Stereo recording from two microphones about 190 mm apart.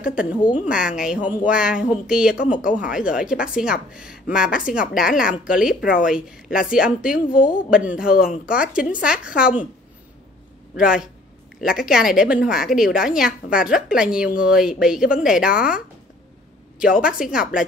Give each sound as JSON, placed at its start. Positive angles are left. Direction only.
{"t": 0.0, "sound": "a woman's voice", "side_deg": -5}
{"t": 5.8, "sound": "speech", "side_deg": 45}
{"t": 6.0, "sound": "a woman's voice", "side_deg": -5}
{"t": 10.8, "sound": "a woman's voice", "side_deg": -5}
{"t": 16.8, "sound": "a woman's voice", "side_deg": -5}